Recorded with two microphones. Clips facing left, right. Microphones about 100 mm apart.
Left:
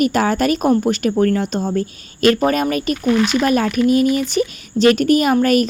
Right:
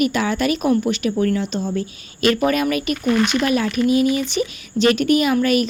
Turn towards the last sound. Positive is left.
turn(degrees=45)  # may be behind; listen again after turning